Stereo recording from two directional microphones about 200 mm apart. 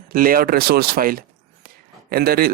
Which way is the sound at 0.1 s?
45° right (ahead or behind).